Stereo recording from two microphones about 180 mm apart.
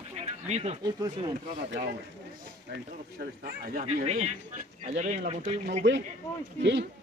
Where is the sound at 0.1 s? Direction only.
35° right (ahead or behind).